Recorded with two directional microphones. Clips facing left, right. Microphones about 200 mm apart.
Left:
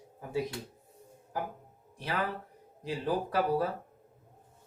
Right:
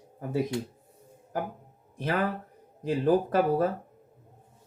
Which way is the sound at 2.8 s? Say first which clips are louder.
Right 8 dB; 50° right (ahead or behind).